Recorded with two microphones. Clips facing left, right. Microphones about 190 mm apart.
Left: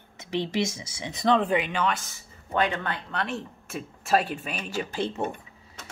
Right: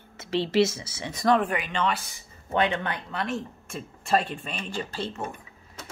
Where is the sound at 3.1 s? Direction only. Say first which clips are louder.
Right 1 dB; centre (ahead or behind).